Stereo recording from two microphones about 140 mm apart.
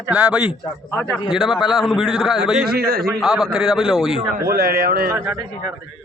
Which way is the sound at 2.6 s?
90° right.